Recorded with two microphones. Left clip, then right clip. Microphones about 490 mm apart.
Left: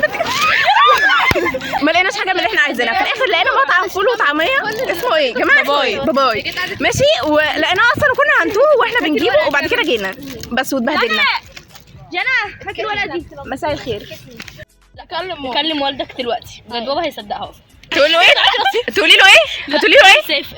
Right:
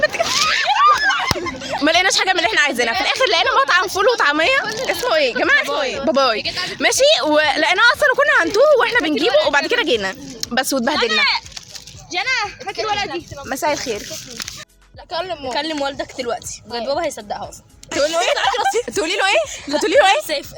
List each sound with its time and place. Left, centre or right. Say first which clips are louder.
0.0 s a sound: left 1 dB; right
0.3 s snicker: left 6 dB; right
1.8 s a sound: even; right
5.6 s speech: left 6 dB; right
6.1 s a woman's voice: left 2 dB; right
10.9 s speech: left 3 dB; right
12.1 s speech: left 3 dB; right
15.1 s a woman's voice: left 3 dB; right
18.3 s speech: left 6 dB; right
18.8 s a woman's voice: left 10 dB; right